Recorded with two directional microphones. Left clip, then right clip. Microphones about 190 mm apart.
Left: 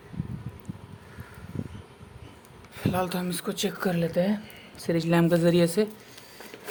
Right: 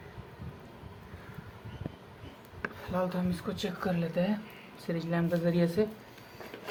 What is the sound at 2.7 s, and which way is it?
Speech, 45° left (ahead or behind).